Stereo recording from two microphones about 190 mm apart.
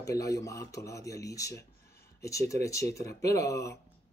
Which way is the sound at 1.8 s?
55° left (ahead or behind).